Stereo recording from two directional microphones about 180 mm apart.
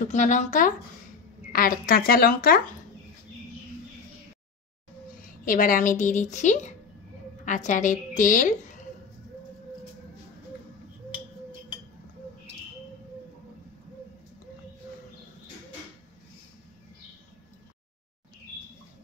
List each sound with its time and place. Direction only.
0.0 s a woman's voice: 45° left (ahead or behind)
5.4 s a woman's voice: 50° left (ahead or behind)